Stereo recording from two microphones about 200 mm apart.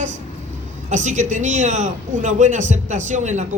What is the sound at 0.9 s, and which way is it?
A man's voice, 35° right (ahead or behind).